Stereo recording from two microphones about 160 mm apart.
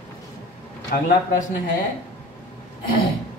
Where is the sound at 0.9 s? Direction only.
60° left (ahead or behind).